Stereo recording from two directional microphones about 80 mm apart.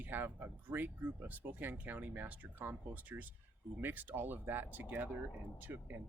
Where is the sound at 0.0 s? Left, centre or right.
Right.